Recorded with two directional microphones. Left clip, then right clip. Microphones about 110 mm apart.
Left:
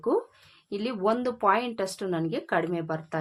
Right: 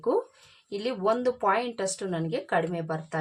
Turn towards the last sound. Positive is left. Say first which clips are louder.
# left 1 dB
turn(degrees=40)  # may be behind; listen again after turning